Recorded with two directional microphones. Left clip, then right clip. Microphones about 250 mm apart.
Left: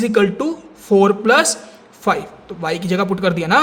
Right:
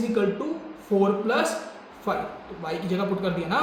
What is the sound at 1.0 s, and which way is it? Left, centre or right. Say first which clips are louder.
Speech: left 10 dB; left.